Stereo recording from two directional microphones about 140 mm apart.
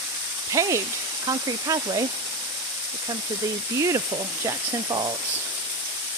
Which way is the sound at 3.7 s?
20° right (ahead or behind).